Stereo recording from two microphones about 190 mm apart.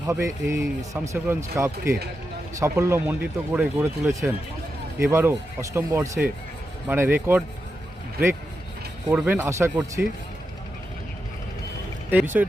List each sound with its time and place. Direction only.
0.4 s speech: 15° right (ahead or behind)
9.1 s speech: 10° right (ahead or behind)
12.1 s speech: 10° right (ahead or behind)